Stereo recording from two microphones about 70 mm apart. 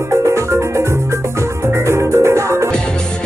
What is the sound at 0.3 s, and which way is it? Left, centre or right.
Music, right.